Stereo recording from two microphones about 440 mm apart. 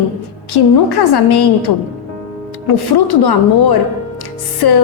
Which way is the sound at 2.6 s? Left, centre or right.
Left.